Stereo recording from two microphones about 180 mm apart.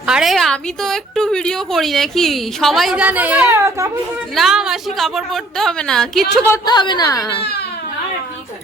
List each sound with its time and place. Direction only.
0.0 s a woman's voice: 5° right (ahead or behind)
4.4 s a woman's voice: centre (ahead or behind)
6.4 s a woman's voice: 20° left (ahead or behind)